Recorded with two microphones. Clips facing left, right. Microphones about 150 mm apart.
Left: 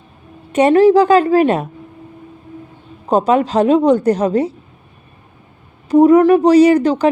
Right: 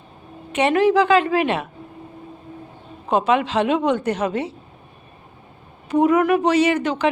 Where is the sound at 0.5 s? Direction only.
40° left (ahead or behind).